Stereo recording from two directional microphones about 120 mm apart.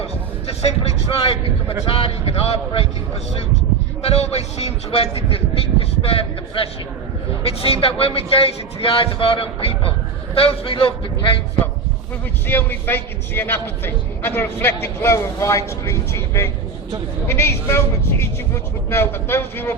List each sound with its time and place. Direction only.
0.0 s a sound: 60° left (ahead or behind)
1.9 s a man's voice: 55° left (ahead or behind)
4.0 s a man's voice: 60° left (ahead or behind)
12.5 s a man's voice: 15° left (ahead or behind)